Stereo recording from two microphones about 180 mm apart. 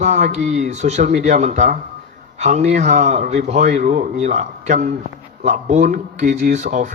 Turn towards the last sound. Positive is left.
turn(degrees=-45)  # may be behind; listen again after turning